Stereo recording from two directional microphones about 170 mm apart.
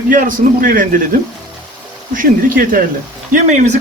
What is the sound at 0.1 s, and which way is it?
Speech, 50° right (ahead or behind).